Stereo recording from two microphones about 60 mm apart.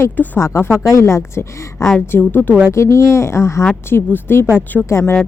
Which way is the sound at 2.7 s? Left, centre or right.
Left.